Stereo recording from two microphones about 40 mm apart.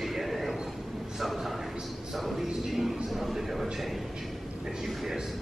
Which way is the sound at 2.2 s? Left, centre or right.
Centre.